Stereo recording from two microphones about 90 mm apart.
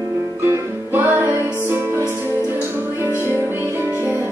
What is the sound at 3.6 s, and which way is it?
Music, 25° right (ahead or behind).